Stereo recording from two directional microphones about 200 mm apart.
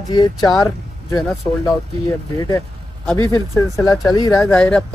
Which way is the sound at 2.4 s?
15° left (ahead or behind).